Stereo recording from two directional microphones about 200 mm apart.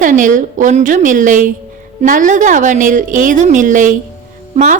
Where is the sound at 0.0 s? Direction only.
40° right (ahead or behind).